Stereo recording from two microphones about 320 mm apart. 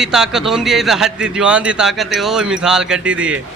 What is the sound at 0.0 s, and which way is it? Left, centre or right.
Speech, centre.